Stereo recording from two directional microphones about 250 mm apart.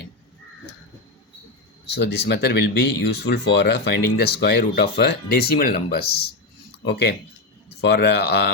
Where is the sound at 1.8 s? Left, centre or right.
Left.